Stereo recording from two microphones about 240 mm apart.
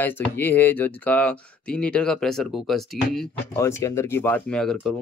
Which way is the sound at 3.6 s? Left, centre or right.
Centre.